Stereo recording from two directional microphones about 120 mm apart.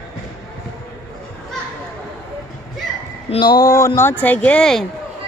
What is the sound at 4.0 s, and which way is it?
Speech, 15° left (ahead or behind).